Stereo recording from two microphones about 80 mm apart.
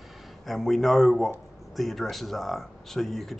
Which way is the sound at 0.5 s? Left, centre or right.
Centre.